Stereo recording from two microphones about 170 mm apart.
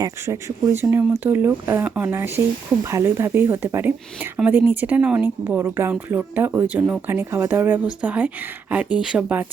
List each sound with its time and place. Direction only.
0.0 s speech: 20° right (ahead or behind)